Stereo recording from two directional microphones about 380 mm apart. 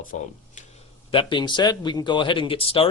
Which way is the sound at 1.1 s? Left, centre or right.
Centre.